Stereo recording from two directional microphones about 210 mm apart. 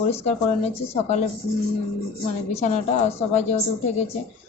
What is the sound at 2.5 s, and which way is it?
A woman's voice, 35° left (ahead or behind).